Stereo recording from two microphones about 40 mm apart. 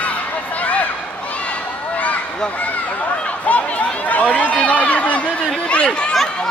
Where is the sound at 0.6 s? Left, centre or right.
Left.